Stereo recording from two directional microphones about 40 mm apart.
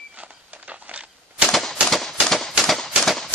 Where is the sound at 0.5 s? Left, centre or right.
Right.